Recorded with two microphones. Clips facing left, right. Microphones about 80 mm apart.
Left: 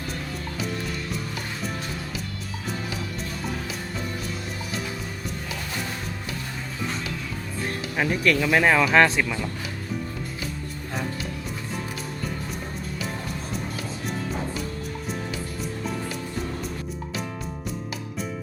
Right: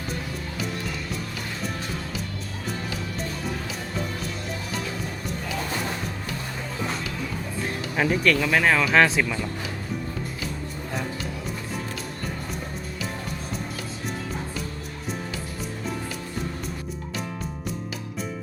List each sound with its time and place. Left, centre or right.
0.6 s music: centre
7.6 s speech: centre